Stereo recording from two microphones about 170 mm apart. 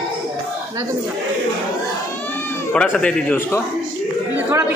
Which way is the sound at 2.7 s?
5° left (ahead or behind).